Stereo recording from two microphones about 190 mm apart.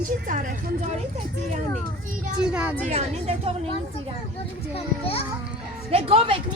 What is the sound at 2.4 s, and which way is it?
Speech, 5° right (ahead or behind).